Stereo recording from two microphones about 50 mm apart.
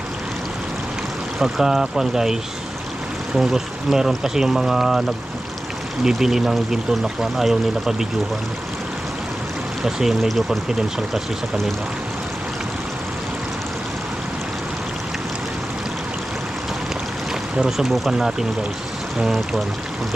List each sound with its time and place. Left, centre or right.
1.4 s speech: centre
6.1 s speech: centre
9.8 s speech: centre
10.2 s speech: centre
17.7 s speech: centre